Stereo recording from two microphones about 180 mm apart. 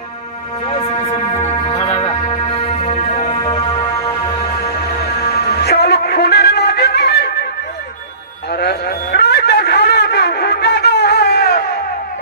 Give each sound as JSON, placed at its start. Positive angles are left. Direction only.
{"t": 0.7, "sound": "music", "side_deg": 35}
{"t": 5.3, "sound": "music", "side_deg": 65}
{"t": 8.5, "sound": "music", "side_deg": 60}